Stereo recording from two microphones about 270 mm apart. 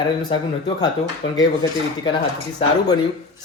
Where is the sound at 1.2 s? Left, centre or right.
Left.